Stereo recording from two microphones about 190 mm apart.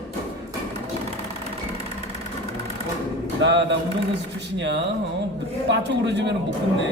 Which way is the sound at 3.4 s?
65° right (ahead or behind).